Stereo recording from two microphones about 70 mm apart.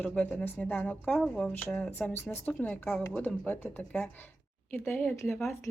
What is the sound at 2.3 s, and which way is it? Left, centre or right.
Speech, left.